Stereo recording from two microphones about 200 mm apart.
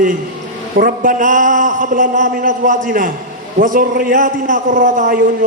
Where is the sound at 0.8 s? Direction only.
45° right (ahead or behind).